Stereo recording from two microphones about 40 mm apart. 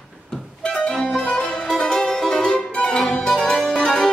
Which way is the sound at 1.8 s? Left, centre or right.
Centre.